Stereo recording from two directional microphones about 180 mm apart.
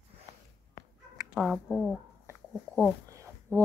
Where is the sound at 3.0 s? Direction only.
15° right (ahead or behind).